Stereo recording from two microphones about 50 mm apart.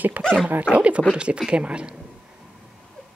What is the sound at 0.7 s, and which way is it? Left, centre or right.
Speech, right.